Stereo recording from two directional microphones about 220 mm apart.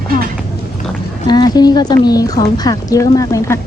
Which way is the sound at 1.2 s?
20° left (ahead or behind).